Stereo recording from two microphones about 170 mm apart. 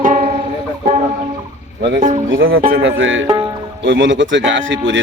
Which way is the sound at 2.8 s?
90° right.